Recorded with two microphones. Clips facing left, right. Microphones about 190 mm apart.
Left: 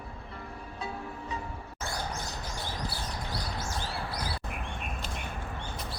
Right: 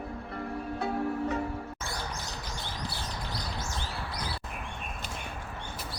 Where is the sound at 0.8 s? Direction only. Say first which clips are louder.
Right 9 dB; 60° right (ahead or behind).